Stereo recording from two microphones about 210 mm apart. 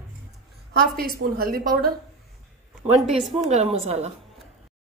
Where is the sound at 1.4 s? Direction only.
45° right (ahead or behind).